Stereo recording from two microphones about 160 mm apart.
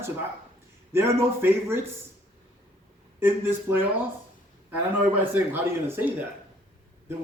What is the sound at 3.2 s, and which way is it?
A man's voice, 15° right (ahead or behind).